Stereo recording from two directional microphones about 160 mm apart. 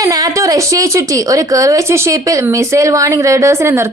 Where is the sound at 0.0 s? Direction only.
20° right (ahead or behind).